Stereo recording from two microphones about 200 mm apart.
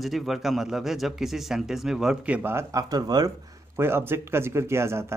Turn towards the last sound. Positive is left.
turn(degrees=-15)  # may be behind; listen again after turning